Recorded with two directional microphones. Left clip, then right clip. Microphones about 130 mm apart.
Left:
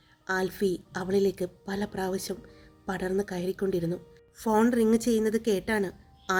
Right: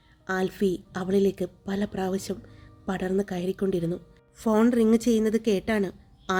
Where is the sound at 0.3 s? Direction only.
30° right (ahead or behind).